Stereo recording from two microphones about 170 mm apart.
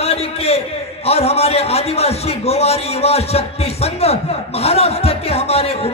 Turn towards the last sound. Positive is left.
turn(degrees=35)  # may be behind; listen again after turning